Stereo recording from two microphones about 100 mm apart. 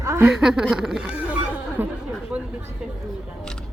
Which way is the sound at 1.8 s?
20° right (ahead or behind).